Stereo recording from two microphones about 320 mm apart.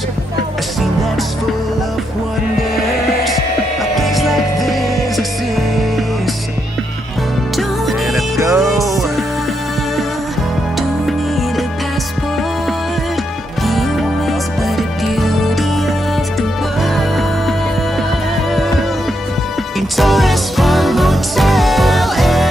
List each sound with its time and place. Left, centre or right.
3.9 s music: centre
7.5 s music: centre
10.8 s music: centre
13.6 s music: centre
18.5 s music: centre
20.0 s music: centre